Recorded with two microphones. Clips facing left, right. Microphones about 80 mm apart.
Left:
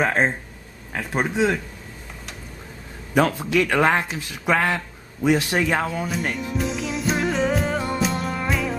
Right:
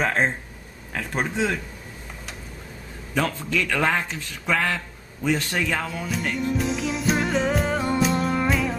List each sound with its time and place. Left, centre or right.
0.0 s a man's voice: centre
3.2 s a man's voice: centre
5.8 s music: centre